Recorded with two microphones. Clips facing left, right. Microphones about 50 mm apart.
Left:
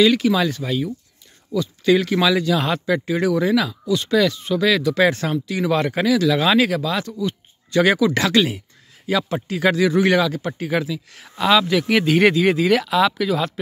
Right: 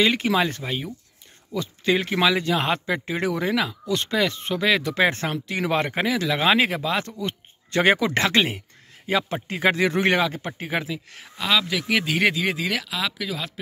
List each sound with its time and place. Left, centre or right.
0.0 s speech: right
3.8 s speech: right
4.1 s speech: right
7.1 s a sound: right
7.8 s speech: right
11.2 s speech: centre